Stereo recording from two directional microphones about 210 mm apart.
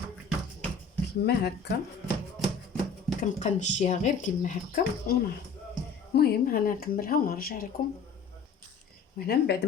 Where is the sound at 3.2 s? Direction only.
35° left (ahead or behind).